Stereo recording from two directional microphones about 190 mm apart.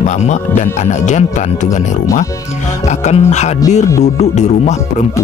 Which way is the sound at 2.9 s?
35° left (ahead or behind).